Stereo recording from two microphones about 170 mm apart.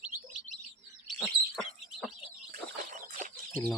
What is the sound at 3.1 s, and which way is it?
Bird, 50° right (ahead or behind).